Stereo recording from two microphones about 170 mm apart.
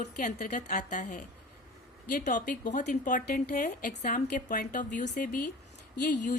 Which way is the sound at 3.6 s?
50° left (ahead or behind).